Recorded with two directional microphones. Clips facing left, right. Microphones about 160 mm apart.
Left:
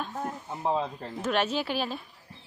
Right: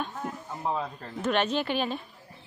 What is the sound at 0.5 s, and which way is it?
Speech, 20° left (ahead or behind).